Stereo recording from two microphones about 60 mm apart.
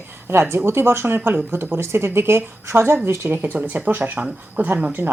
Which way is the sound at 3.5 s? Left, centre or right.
Right.